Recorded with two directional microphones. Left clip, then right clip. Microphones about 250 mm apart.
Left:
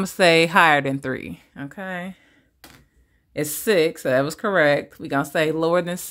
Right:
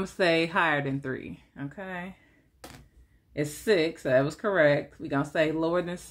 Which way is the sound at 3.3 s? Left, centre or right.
Left.